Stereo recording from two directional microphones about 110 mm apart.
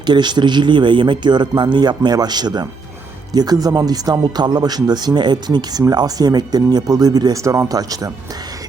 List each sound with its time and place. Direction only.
0.0 s a man's voice: 40° right (ahead or behind)